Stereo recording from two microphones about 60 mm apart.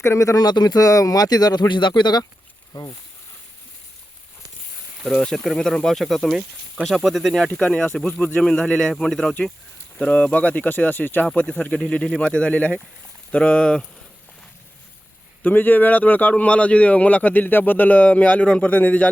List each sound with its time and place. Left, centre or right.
0.0 s speech: left
2.7 s speech: left
5.0 s speech: centre
7.4 s speech: centre
10.0 s speech: centre
11.3 s speech: left
15.4 s speech: left